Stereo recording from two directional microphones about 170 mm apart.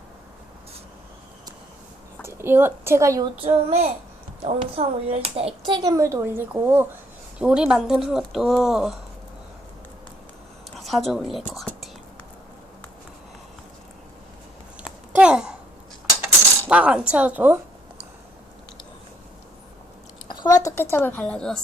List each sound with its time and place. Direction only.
2.2 s a woman's voice: 15° right (ahead or behind)
3.3 s a child's voice: 35° right (ahead or behind); by 9.0 s centre (ahead or behind)
10.8 s speech: centre (ahead or behind)
14.8 s a sound: 5° right (ahead or behind)
16.6 s a woman's voice: 5° right (ahead or behind)
20.2 s a woman's voice: 25° left (ahead or behind); by 21.6 s 5° left (ahead or behind)